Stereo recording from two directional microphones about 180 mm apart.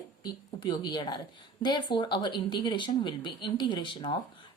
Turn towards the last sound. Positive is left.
turn(degrees=25)  # may be behind; listen again after turning